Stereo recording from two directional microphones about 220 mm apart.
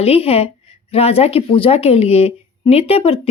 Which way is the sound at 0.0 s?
25° left (ahead or behind).